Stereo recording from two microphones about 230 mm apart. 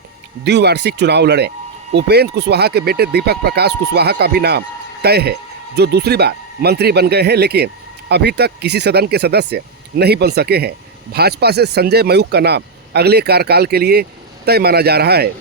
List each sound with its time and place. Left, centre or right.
0.4 s speech: right